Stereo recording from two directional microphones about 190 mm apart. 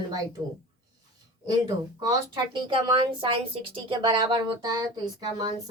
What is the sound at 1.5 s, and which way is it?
A woman's voice, 20° right (ahead or behind).